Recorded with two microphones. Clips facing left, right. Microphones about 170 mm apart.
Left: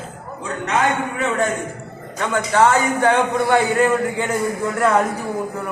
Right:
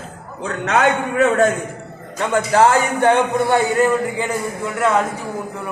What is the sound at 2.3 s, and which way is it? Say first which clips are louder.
Speech: right 2 dB; 30° right (ahead or behind).